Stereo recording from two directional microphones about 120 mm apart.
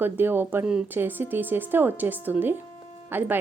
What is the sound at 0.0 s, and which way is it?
Speech, 15° right (ahead or behind).